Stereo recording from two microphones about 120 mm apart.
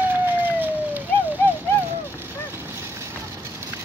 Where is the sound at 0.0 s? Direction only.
15° right (ahead or behind).